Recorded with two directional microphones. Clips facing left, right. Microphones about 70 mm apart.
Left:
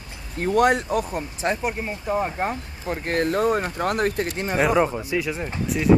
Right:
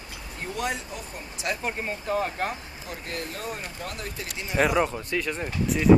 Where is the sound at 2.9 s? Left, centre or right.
Left.